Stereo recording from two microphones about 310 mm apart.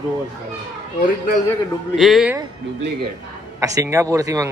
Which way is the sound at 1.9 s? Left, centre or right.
Centre.